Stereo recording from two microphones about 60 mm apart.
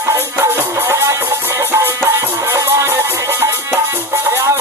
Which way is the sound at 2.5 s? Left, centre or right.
Right.